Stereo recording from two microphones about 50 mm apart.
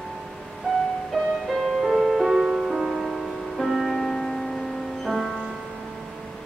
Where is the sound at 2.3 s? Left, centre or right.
Centre.